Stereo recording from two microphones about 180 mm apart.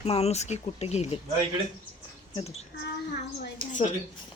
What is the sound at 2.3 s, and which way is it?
Speech, 35° left (ahead or behind).